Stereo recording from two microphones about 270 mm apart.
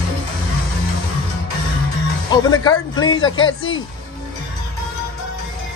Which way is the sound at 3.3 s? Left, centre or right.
Left.